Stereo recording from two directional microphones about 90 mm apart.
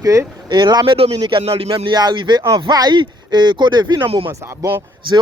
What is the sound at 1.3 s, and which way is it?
Speech, 80° right.